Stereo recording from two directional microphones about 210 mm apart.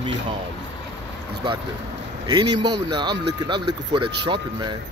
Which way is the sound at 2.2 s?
20° right (ahead or behind).